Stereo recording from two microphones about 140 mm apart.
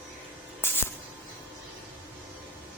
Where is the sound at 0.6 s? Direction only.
15° left (ahead or behind).